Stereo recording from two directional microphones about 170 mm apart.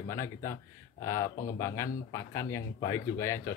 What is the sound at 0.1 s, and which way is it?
Speech, 15° left (ahead or behind).